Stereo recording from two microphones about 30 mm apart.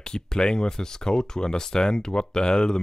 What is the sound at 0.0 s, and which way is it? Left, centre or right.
Speech, left.